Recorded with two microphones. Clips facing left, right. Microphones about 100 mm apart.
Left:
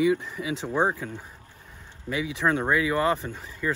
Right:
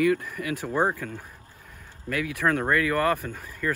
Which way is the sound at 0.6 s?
15° left (ahead or behind).